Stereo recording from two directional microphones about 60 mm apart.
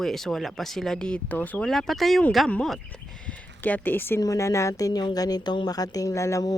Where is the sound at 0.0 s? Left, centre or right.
Centre.